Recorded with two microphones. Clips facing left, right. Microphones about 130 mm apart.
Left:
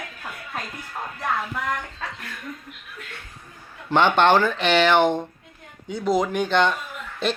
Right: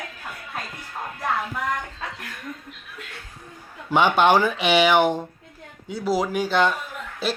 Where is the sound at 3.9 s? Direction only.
10° right (ahead or behind).